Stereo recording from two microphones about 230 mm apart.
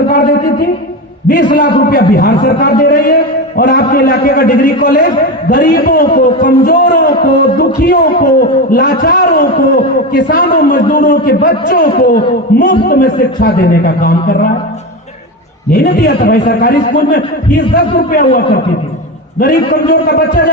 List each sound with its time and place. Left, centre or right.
1.3 s a man's voice: left
15.7 s a man's voice: left
19.4 s a man's voice: left